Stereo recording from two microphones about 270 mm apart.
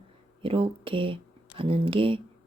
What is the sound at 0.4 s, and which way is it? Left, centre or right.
Speech, centre.